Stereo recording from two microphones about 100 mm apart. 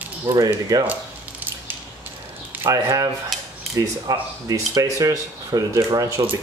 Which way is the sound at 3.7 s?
35° right (ahead or behind).